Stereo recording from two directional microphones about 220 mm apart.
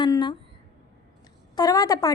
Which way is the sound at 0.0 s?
20° left (ahead or behind).